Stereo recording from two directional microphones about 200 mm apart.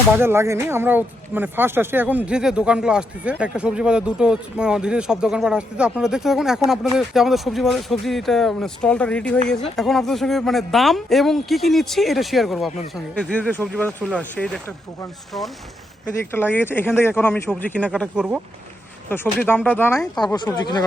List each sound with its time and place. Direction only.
0.2 s speech: 10° right (ahead or behind); by 14.6 s 5° left (ahead or behind)
16.3 s speech: 10° left (ahead or behind)
20.1 s speech: 20° left (ahead or behind)